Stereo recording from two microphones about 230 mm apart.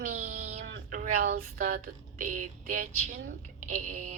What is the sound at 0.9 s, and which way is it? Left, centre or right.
A woman's voice, right.